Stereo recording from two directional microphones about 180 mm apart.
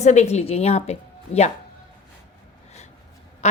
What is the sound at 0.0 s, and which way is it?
A woman's voice, 40° left (ahead or behind).